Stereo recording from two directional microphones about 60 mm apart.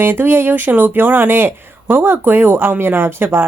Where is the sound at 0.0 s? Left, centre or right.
Right.